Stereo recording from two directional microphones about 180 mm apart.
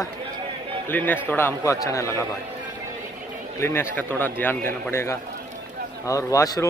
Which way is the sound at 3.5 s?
15° left (ahead or behind).